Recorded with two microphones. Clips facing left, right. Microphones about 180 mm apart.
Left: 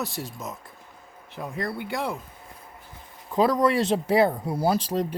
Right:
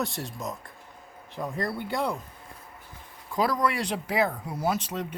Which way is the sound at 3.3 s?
20° left (ahead or behind).